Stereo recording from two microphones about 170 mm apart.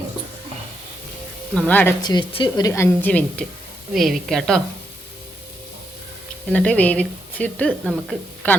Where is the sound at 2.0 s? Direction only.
25° left (ahead or behind).